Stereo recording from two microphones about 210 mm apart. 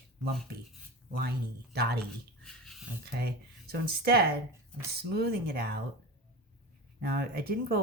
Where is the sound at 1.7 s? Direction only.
50° right (ahead or behind).